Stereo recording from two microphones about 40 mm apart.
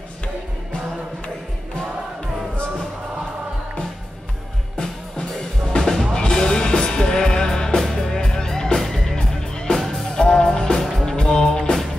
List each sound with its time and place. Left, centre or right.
5.8 s music: centre
9.8 s music: centre
10.3 s music: centre
10.8 s music: centre
11.1 s music: centre